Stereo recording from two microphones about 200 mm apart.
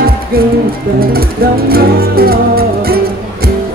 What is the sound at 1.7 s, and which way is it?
Music, 50° right (ahead or behind).